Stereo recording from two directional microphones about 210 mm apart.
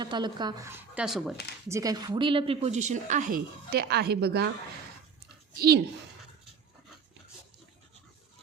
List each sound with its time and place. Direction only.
0.0 s speech: 20° right (ahead or behind); by 1.4 s centre (ahead or behind)
1.7 s a woman's voice: 15° right (ahead or behind); by 4.4 s 50° right (ahead or behind)
5.5 s speech: 45° right (ahead or behind)